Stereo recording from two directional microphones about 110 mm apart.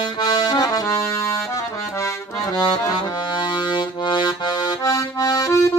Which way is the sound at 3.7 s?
45° left (ahead or behind).